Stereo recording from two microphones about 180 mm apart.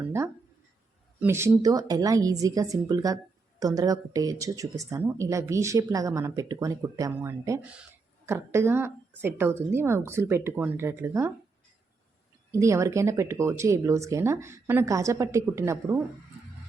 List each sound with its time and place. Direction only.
1.2 s speech: 15° right (ahead or behind)
12.5 s speech: 15° right (ahead or behind)